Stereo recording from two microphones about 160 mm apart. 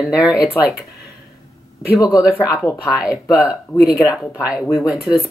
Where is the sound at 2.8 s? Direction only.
5° right (ahead or behind).